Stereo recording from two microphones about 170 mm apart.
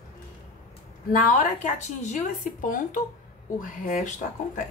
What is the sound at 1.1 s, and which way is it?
Speech, 50° left (ahead or behind).